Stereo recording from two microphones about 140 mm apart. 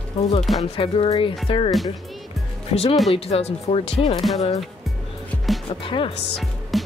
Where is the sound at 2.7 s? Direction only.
45° left (ahead or behind).